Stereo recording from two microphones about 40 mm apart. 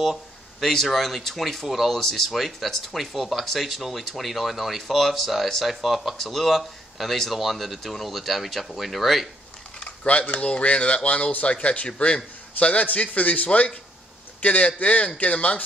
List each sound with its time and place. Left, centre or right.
0.0 s speech: centre
9.8 s speech: left